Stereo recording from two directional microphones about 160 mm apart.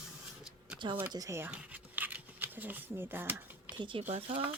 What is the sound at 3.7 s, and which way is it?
Speech, 30° right (ahead or behind).